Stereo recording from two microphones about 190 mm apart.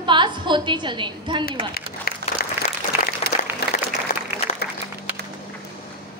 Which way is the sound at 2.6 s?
10° right (ahead or behind).